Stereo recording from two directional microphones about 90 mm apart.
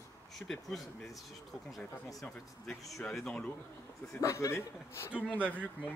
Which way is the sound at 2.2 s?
5° left (ahead or behind).